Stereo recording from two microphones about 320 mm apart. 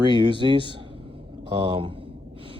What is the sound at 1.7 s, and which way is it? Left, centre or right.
Gasp, centre.